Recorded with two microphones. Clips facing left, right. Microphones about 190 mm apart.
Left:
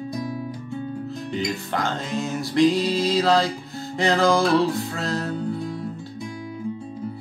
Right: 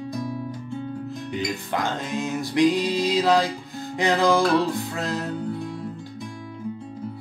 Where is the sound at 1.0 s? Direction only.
15° right (ahead or behind).